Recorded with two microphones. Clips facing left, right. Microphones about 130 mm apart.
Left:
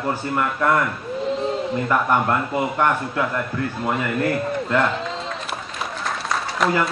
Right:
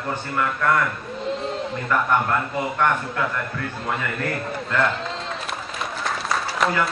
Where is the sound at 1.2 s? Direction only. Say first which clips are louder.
Left 3 dB; centre (ahead or behind).